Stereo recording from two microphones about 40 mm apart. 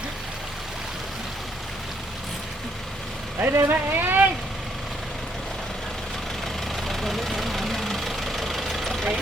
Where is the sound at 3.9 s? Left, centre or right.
Right.